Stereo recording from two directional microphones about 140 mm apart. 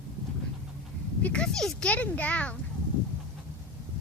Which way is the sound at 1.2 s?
5° left (ahead or behind).